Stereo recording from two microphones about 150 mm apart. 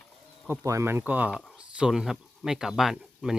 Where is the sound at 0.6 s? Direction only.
20° right (ahead or behind).